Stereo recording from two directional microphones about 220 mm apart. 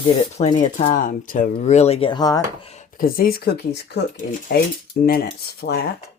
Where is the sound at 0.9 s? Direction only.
40° left (ahead or behind); by 2.4 s 20° left (ahead or behind).